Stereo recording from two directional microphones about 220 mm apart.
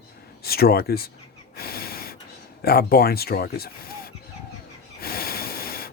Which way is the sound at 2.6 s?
45° left (ahead or behind).